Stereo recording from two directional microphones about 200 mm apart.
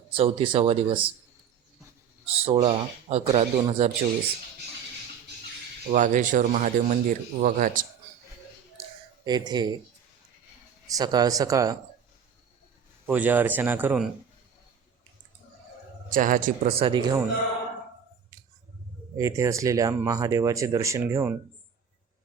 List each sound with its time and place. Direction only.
0.2 s speech: 25° right (ahead or behind)
2.4 s speech: 30° right (ahead or behind)
5.9 s speech: 40° right (ahead or behind)
8.8 s a sound: 20° right (ahead or behind)
10.8 s speech: 20° right (ahead or behind)
13.1 s speech: 10° right (ahead or behind)
16.1 s speech: 40° right (ahead or behind)
16.7 s speech: 25° right (ahead or behind)
19.1 s speech: 15° right (ahead or behind)